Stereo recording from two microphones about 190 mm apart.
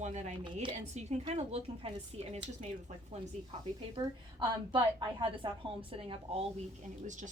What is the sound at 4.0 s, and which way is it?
A woman's voice, 20° right (ahead or behind).